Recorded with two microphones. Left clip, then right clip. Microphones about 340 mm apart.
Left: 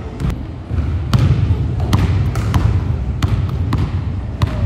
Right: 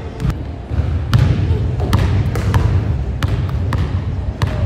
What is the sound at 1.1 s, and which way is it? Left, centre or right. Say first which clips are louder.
Trickle: even; centre.